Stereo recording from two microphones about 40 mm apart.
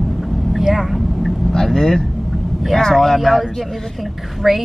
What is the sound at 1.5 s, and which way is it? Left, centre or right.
Vehicle, centre.